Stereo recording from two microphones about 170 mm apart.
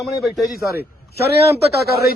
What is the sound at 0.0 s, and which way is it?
Speech, centre (ahead or behind).